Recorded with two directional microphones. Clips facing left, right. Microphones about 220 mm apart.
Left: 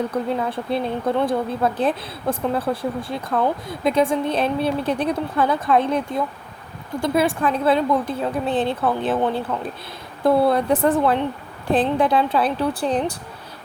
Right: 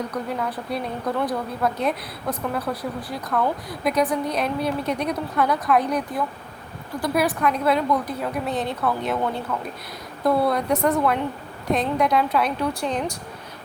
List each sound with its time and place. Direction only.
0.1 s a woman's voice: 25° left (ahead or behind)